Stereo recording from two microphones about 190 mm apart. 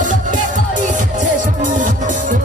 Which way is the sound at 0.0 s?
40° right (ahead or behind).